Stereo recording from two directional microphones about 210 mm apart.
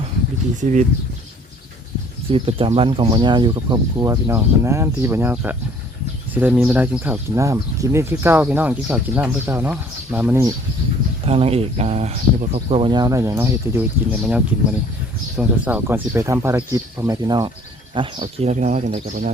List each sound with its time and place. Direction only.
0.6 s speech: 35° right (ahead or behind)
2.3 s speech: 25° right (ahead or behind); by 10.5 s 10° right (ahead or behind)
11.3 s speech: 30° right (ahead or behind)